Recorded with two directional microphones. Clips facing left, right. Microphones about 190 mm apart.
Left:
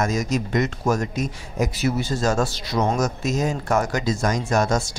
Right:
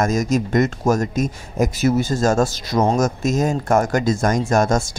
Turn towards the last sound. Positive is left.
turn(degrees=-50)  # may be behind; listen again after turning